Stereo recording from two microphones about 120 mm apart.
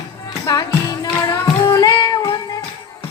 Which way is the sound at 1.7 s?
35° left (ahead or behind).